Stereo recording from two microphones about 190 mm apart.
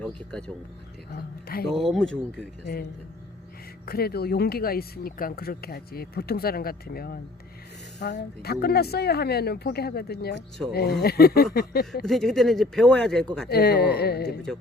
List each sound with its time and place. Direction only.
0.0 s speech: 5° left (ahead or behind)
1.1 s speech: 50° left (ahead or behind)
1.6 s speech: centre (ahead or behind)
3.8 s speech: 55° left (ahead or behind)
12.0 s speech: centre (ahead or behind)
13.5 s speech: 60° left (ahead or behind)